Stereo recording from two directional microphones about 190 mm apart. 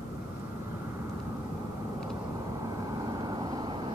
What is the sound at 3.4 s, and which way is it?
Vehicle, 25° right (ahead or behind).